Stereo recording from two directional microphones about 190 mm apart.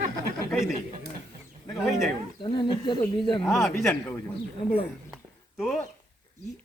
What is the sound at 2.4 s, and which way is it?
Speech, 25° left (ahead or behind).